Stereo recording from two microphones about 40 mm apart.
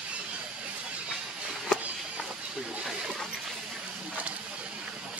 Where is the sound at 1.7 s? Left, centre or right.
Centre.